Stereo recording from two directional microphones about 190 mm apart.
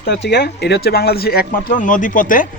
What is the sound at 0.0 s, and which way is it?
Speech, 60° left (ahead or behind).